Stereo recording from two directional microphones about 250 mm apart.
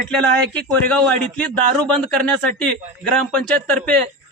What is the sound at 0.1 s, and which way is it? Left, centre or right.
Speech, centre.